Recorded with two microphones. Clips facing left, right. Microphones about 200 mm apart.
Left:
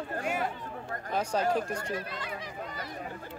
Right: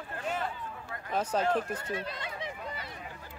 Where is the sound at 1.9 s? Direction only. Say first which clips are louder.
Left 1 dB; 25° right (ahead or behind).